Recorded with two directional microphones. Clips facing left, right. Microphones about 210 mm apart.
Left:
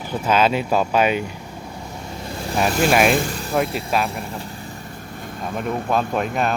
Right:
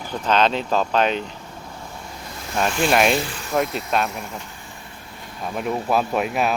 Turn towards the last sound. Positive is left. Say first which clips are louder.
# even
turn(degrees=-5)  # may be behind; listen again after turning